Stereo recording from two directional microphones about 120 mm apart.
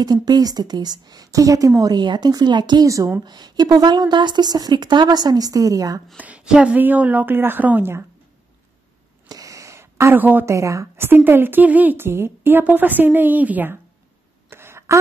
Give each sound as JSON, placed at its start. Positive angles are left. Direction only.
{"t": 0.0, "sound": "a woman's voice", "side_deg": -35}
{"t": 6.1, "sound": "a woman's voice", "side_deg": -10}
{"t": 9.3, "sound": "a woman's voice", "side_deg": -30}
{"t": 14.5, "sound": "a sound", "side_deg": -20}